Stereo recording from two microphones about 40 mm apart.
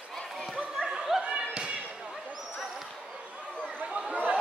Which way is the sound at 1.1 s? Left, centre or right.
Centre.